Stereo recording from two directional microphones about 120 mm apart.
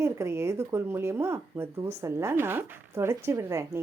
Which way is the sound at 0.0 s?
25° right (ahead or behind).